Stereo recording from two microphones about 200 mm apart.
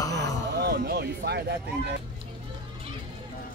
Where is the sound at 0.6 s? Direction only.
50° right (ahead or behind).